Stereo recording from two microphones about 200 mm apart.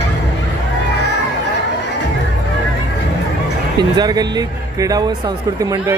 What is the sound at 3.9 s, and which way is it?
Speech, 20° right (ahead or behind).